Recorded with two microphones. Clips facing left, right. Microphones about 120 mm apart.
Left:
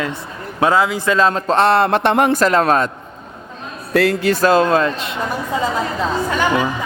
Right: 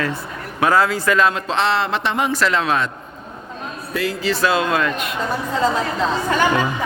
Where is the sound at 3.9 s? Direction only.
70° left (ahead or behind).